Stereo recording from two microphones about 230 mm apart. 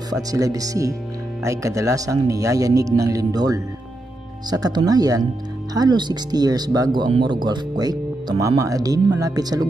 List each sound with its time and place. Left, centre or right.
0.1 s speech: centre